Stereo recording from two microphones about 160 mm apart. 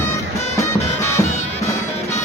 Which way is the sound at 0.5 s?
15° left (ahead or behind).